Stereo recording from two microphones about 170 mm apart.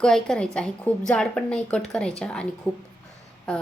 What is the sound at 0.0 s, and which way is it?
A woman's voice, 5° left (ahead or behind).